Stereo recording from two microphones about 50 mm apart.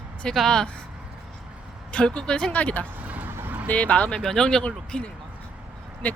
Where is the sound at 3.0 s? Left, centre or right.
Right.